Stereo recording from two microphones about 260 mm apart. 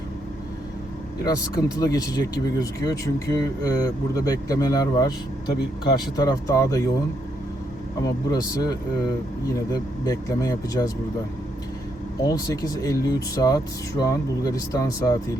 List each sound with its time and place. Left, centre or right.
1.2 s speech: centre
5.5 s speech: left
6.1 s speech: centre
8.3 s speech: centre
10.1 s speech: centre
12.2 s speech: centre